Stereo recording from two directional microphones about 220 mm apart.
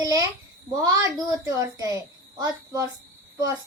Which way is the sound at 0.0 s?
15° right (ahead or behind).